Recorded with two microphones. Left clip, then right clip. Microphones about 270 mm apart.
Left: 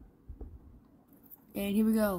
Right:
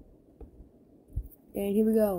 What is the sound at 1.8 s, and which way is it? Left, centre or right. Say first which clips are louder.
Speech: right 5 dB; centre.